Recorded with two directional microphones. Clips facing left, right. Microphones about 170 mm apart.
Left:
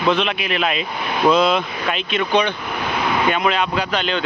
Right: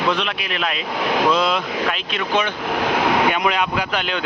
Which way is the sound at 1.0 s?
90° right.